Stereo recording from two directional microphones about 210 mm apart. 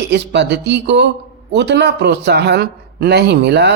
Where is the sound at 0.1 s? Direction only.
55° right (ahead or behind).